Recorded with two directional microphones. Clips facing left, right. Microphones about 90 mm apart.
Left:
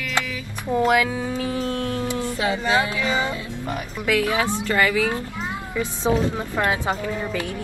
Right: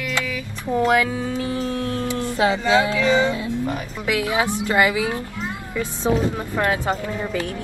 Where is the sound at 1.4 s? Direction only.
20° left (ahead or behind).